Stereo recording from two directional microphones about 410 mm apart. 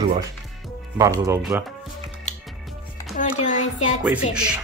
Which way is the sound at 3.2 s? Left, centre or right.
Centre.